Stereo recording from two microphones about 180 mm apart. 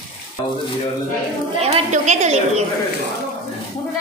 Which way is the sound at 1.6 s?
40° right (ahead or behind).